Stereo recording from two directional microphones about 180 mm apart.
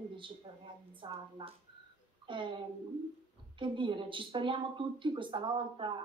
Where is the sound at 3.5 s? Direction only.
25° right (ahead or behind).